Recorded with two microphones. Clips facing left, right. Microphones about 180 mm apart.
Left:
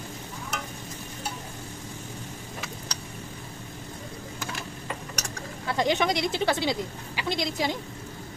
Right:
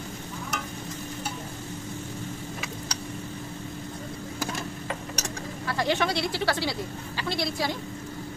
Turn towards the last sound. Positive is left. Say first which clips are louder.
# left 1 dB
turn(degrees=20)  # may be behind; listen again after turning